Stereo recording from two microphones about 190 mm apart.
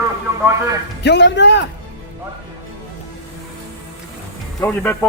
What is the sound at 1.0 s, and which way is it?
Speech, 65° left (ahead or behind).